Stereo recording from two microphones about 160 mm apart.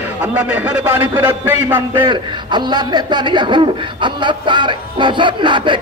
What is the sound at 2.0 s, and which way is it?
A man's voice, 30° right (ahead or behind).